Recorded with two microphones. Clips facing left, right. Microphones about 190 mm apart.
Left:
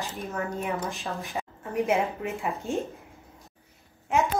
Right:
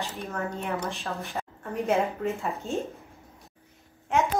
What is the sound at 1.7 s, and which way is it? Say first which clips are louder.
Speech: even; 15° left (ahead or behind).